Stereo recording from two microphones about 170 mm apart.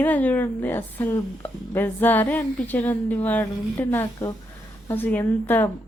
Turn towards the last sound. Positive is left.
turn(degrees=10)  # may be behind; listen again after turning